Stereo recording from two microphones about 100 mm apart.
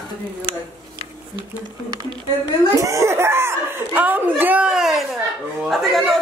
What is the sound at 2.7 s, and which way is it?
A woman's voice, 35° right (ahead or behind).